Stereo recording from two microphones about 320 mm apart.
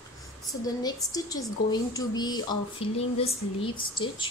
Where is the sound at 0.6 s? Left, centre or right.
Centre.